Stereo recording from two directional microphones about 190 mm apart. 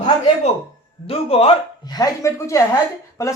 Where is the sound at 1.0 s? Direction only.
30° left (ahead or behind).